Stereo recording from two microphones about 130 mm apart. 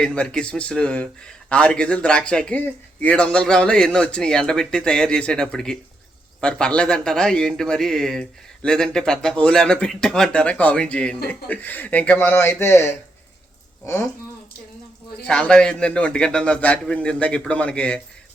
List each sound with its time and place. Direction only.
0.0 s speech: 10° left (ahead or behind)
15.3 s speech: 5° left (ahead or behind)